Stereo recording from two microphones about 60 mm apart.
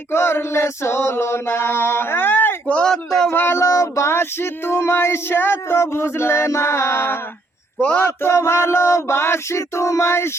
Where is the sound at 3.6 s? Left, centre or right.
Left.